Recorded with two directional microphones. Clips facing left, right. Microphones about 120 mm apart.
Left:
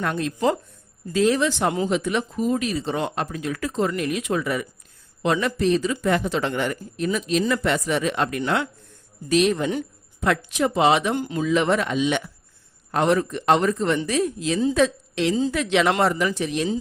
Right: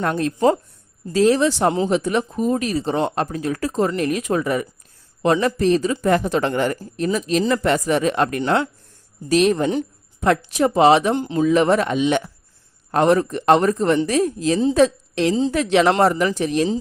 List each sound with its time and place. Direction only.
0.0 s speech: 40° right (ahead or behind)
2.0 s speech: 40° right (ahead or behind)
11.1 s speech: 25° right (ahead or behind)
11.4 s a man's voice: 40° right (ahead or behind)